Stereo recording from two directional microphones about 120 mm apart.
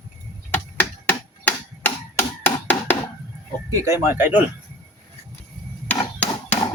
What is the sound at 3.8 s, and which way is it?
Speech, 25° right (ahead or behind).